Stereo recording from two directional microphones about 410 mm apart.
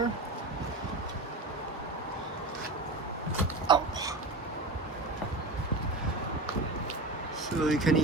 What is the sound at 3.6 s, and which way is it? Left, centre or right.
Dog, centre.